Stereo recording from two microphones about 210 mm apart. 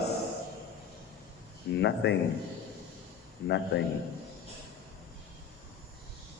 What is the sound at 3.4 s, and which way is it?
Speech, 55° left (ahead or behind).